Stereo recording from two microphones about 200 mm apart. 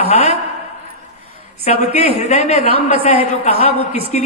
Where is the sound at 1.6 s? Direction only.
30° left (ahead or behind).